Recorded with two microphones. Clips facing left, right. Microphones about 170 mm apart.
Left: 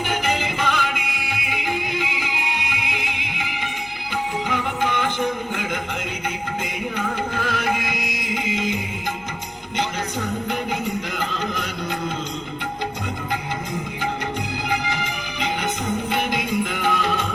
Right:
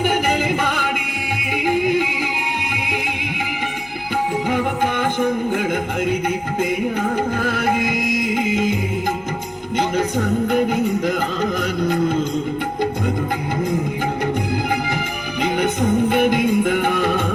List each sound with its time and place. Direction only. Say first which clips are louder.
0.0 s music: right 5 dB; 50° right (ahead or behind)
4.4 s music: right 4 dB; 45° right (ahead or behind)
7.3 s music: right 4 dB; 45° right (ahead or behind)
14.7 s music: right 3 dB; 50° right (ahead or behind)